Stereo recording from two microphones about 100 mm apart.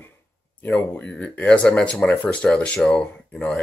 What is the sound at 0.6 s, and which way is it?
Speech, 20° left (ahead or behind).